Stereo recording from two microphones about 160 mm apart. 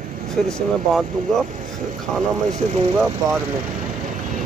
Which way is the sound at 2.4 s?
45° right (ahead or behind).